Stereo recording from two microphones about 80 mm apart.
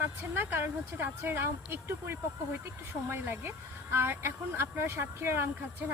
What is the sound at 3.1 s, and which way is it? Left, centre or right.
Speech, right.